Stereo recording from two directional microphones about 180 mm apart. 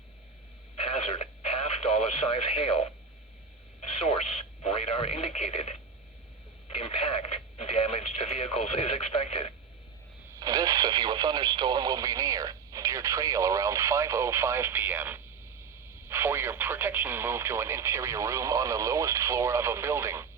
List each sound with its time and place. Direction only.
0.8 s radio: 35° left (ahead or behind)
3.8 s speech: 35° left (ahead or behind)
6.7 s speech: 30° left (ahead or behind)
10.3 s speech: 20° right (ahead or behind)